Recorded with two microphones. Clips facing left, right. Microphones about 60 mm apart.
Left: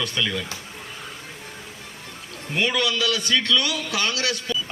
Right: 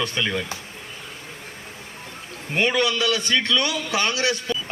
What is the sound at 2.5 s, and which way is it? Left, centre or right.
A man's voice, right.